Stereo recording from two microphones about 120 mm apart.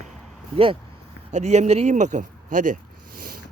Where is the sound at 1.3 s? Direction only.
75° right (ahead or behind).